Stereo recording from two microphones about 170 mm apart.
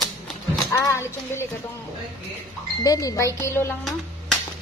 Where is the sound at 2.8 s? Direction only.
20° left (ahead or behind).